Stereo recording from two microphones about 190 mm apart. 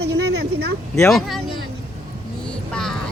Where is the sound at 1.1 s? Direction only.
Centre (ahead or behind).